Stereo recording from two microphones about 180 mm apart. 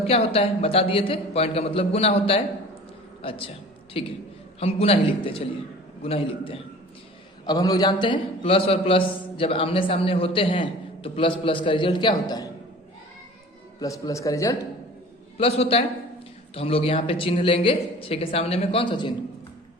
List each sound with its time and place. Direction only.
0.1 s a man's voice: 35° left (ahead or behind)
7.4 s a man's voice: 20° left (ahead or behind)
13.7 s a man's voice: 20° left (ahead or behind)
15.4 s speech: 30° left (ahead or behind)